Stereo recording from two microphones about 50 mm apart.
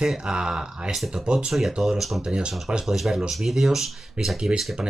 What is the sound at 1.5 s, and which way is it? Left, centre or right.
Speech, centre.